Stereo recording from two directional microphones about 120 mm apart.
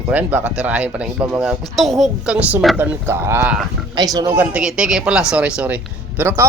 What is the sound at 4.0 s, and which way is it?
Speech, 30° right (ahead or behind).